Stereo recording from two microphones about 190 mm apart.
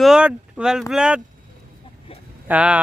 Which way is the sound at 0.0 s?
5° right (ahead or behind).